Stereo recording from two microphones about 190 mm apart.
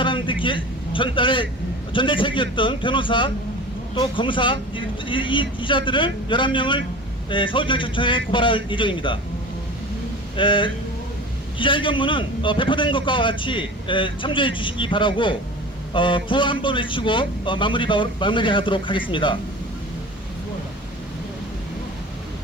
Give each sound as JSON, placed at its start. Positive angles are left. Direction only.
{"t": 0.0, "sound": "vehicle", "side_deg": 25}
{"t": 1.9, "sound": "a man's voice", "side_deg": 25}
{"t": 10.3, "sound": "a man's voice", "side_deg": 25}